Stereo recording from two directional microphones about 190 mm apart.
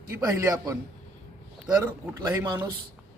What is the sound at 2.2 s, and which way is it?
Speech, 20° right (ahead or behind).